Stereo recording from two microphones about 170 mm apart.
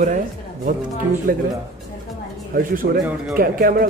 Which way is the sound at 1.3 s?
60° right (ahead or behind).